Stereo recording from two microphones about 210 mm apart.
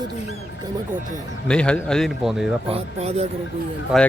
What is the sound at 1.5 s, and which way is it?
Speech, 5° left (ahead or behind).